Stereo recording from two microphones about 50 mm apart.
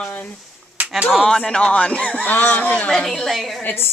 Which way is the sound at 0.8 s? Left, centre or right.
Right.